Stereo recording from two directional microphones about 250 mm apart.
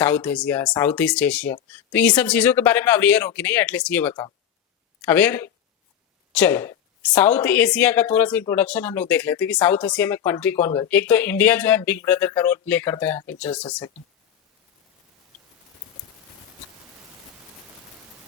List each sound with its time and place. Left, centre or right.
0.0 s a woman's voice: centre